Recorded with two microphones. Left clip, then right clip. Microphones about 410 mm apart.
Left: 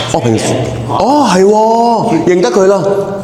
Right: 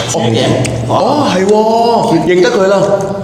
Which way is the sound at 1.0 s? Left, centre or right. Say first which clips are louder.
Left 5 dB; left.